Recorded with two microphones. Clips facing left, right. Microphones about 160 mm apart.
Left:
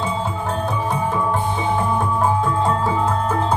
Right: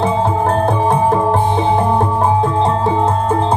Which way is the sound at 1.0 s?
35° right (ahead or behind).